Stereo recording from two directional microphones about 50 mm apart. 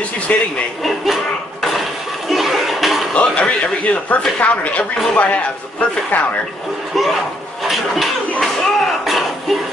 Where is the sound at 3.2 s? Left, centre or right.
Left.